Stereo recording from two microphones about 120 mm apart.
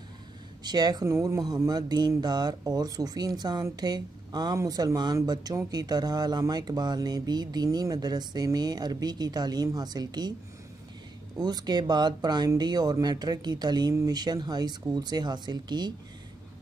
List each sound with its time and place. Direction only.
0.7 s speech: 35° right (ahead or behind)
1.0 s speech: 25° right (ahead or behind)
11.3 s speech: 35° right (ahead or behind)